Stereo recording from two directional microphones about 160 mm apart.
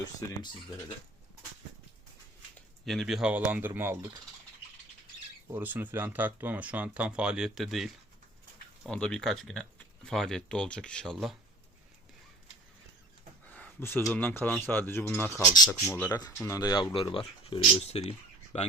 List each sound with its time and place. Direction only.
2.6 s speech: centre (ahead or behind)
5.5 s speech: 10° right (ahead or behind)
8.9 s speech: 5° left (ahead or behind)
13.5 s a sound: 10° left (ahead or behind)
14.1 s speech: 10° left (ahead or behind)
15.4 s speech: 25° left (ahead or behind); by 18.7 s 45° left (ahead or behind)